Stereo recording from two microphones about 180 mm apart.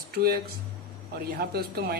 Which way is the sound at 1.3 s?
60° right (ahead or behind).